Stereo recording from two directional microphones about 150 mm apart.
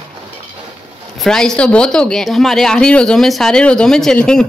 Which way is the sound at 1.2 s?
5° left (ahead or behind).